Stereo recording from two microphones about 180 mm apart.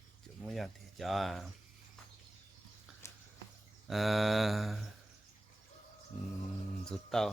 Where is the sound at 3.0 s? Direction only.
15° left (ahead or behind).